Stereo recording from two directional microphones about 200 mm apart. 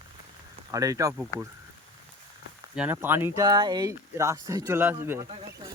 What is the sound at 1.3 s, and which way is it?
Speech, 15° left (ahead or behind).